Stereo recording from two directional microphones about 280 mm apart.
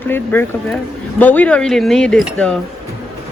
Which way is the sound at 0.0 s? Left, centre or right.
Centre.